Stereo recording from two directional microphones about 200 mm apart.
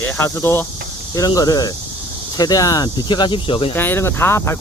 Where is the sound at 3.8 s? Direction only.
10° left (ahead or behind).